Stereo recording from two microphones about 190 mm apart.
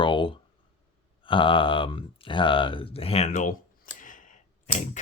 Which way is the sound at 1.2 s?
25° left (ahead or behind).